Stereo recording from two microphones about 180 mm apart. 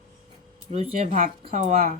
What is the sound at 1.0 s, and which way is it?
Speech, 50° right (ahead or behind).